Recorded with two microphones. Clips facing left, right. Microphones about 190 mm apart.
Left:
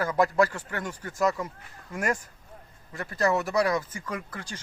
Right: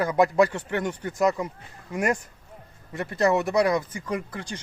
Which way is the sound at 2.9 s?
25° right (ahead or behind).